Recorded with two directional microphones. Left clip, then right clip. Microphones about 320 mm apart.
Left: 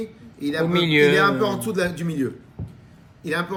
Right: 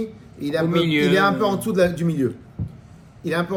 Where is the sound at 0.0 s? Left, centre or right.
Centre.